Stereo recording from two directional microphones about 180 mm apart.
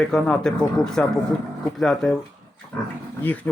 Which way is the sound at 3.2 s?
10° left (ahead or behind).